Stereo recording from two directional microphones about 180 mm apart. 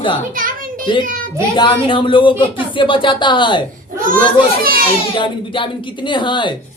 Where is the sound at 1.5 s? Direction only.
25° left (ahead or behind).